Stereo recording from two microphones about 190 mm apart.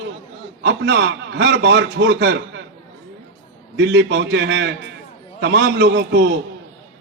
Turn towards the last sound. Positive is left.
turn(degrees=-60)  # may be behind; listen again after turning